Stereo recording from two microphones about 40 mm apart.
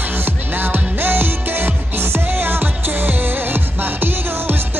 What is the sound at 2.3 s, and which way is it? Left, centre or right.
Music, right.